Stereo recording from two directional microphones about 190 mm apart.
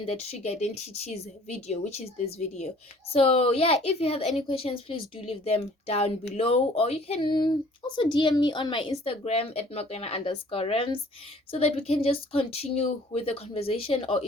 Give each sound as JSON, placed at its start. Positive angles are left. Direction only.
{"t": 0.0, "sound": "speech", "side_deg": 35}